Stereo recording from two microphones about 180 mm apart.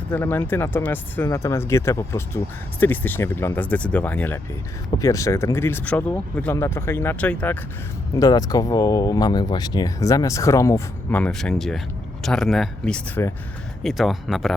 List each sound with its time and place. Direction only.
0.1 s speech: 10° left (ahead or behind)
8.1 s speech: 20° left (ahead or behind); by 14.5 s centre (ahead or behind)